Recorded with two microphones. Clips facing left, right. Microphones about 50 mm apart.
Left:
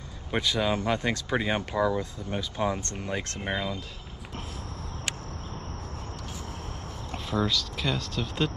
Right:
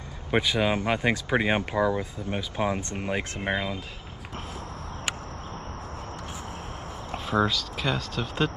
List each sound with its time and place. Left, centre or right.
0.3 s speech: centre
7.1 s speech: centre